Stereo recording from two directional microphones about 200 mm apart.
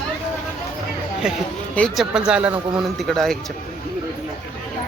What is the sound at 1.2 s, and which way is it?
Speech, 5° right (ahead or behind).